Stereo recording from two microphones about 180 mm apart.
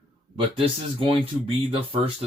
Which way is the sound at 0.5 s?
30° right (ahead or behind).